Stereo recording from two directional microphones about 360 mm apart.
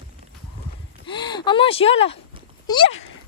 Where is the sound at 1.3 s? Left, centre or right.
Centre.